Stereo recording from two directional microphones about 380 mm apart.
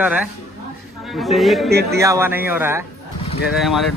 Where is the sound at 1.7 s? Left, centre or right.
Right.